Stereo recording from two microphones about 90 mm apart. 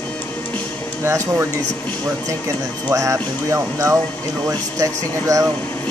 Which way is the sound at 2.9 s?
35° right (ahead or behind).